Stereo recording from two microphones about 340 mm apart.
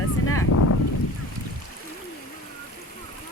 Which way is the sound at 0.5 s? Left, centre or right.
Left.